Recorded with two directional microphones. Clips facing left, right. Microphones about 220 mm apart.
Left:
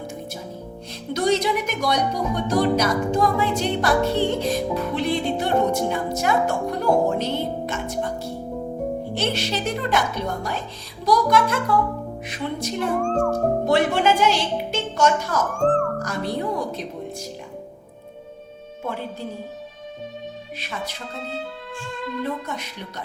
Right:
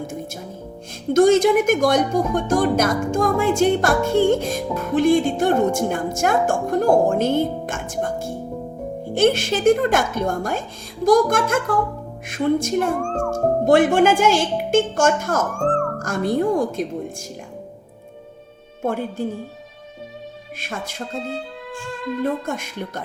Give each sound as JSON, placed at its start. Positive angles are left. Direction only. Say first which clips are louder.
{"t": 1.1, "sound": "speech", "louder": "right 7 dB", "side_deg": -50}
{"t": 18.8, "sound": "speech", "louder": "right 6 dB", "side_deg": -50}
{"t": 20.6, "sound": "speech", "louder": "right 4 dB", "side_deg": -50}
{"t": 22.2, "sound": "speech", "louder": "right 6 dB", "side_deg": -50}